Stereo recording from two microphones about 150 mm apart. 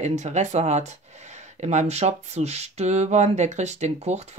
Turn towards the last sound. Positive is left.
turn(degrees=-45)  # may be behind; listen again after turning